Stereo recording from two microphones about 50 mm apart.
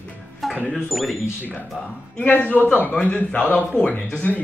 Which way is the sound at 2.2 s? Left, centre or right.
Left.